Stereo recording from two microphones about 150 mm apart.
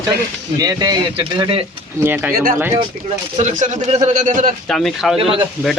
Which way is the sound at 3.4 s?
50° right (ahead or behind).